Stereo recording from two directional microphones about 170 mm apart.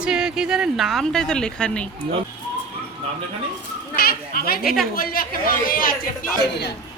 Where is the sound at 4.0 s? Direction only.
60° left (ahead or behind).